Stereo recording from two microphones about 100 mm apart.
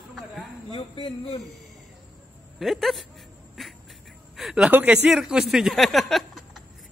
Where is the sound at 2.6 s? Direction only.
Centre (ahead or behind).